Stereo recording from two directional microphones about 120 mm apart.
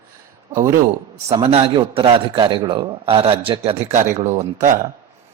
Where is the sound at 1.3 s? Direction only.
50° right (ahead or behind).